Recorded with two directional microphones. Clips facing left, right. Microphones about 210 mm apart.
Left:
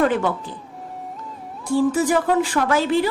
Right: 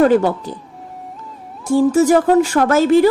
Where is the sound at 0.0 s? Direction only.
40° right (ahead or behind).